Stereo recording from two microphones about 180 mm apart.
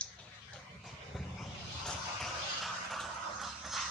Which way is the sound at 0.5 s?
Centre (ahead or behind).